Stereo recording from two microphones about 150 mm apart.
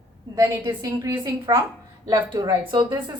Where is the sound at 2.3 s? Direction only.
30° right (ahead or behind).